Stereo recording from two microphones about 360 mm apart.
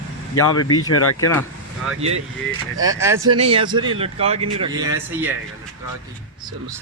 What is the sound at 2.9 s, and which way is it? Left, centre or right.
Speech, centre.